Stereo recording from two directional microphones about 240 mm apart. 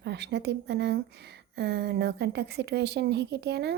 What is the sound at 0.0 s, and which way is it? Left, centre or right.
A woman's voice, right.